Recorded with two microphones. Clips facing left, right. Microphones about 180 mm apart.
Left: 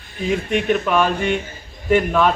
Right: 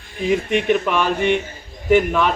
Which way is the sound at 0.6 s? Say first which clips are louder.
Even; 10° right (ahead or behind).